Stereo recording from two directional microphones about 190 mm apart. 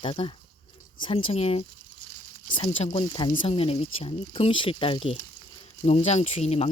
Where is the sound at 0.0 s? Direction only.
25° left (ahead or behind).